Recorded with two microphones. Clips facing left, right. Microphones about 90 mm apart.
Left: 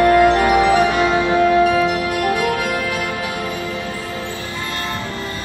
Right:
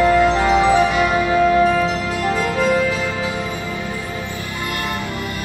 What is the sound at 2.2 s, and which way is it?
Music, 65° left (ahead or behind).